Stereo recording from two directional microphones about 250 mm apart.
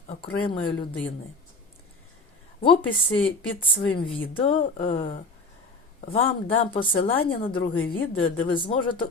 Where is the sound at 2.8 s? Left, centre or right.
Left.